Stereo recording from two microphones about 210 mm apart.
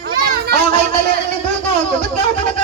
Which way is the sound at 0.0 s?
45° right (ahead or behind).